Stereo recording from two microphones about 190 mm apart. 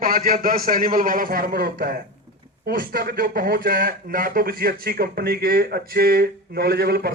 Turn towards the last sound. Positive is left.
turn(degrees=-55)  # may be behind; listen again after turning